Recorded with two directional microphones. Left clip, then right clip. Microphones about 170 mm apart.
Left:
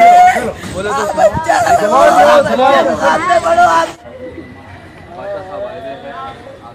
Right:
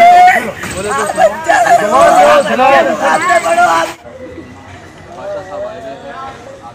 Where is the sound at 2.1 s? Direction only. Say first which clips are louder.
Right 1 dB; 20° left (ahead or behind).